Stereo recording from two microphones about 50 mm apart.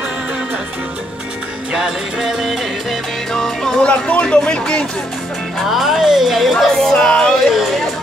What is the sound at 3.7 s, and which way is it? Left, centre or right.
Speech, left.